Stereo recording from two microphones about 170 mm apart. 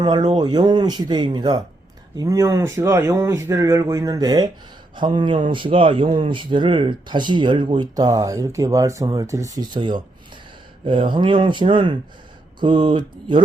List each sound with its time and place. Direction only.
0.0 s speech: 25° right (ahead or behind)